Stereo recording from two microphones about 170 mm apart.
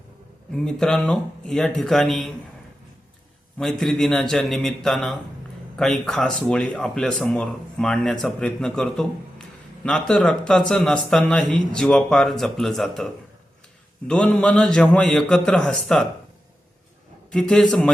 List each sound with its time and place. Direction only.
0.5 s speech: 5° left (ahead or behind)
3.6 s speech: 5° left (ahead or behind)
14.1 s speech: 5° left (ahead or behind)
17.3 s speech: 5° left (ahead or behind)